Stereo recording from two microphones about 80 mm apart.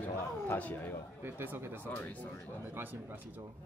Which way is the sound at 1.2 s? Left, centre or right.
Right.